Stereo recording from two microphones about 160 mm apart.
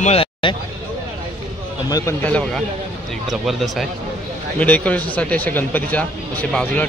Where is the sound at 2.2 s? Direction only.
5° left (ahead or behind).